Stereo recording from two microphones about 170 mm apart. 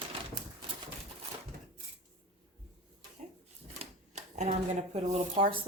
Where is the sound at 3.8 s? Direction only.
40° right (ahead or behind).